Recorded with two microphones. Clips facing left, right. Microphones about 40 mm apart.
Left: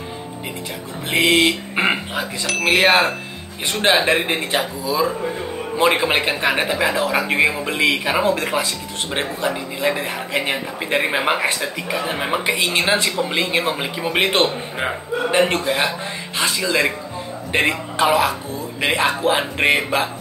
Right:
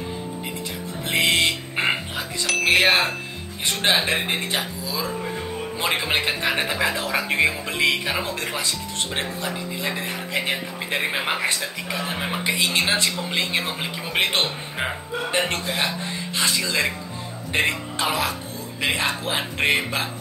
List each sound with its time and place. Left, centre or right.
1.1 s speech: centre
2.4 s speech: centre
3.6 s speech: centre